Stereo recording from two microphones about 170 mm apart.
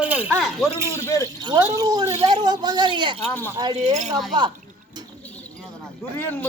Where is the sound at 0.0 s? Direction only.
10° right (ahead or behind).